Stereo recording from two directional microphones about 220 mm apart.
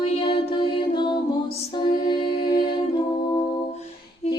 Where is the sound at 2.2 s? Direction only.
45° left (ahead or behind).